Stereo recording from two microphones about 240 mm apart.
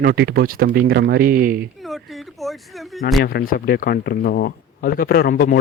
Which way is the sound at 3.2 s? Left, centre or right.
Left.